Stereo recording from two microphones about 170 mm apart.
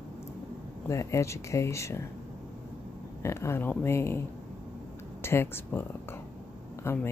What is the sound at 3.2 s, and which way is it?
Speech, 15° left (ahead or behind).